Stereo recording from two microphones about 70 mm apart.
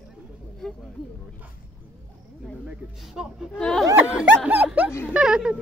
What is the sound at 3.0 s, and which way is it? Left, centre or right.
Speech, centre.